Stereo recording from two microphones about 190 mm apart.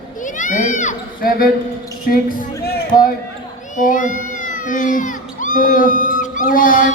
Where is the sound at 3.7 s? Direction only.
45° left (ahead or behind).